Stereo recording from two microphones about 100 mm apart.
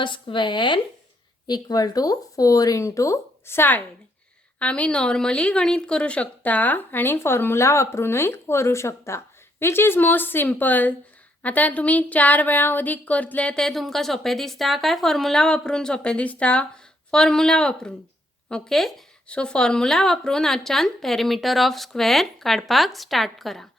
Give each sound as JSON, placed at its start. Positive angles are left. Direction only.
{"t": 0.0, "sound": "a woman's voice", "side_deg": 55}